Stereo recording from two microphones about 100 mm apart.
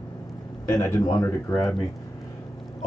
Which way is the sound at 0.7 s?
30° left (ahead or behind).